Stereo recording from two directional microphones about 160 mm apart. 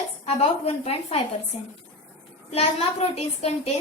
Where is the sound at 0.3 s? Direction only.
40° left (ahead or behind).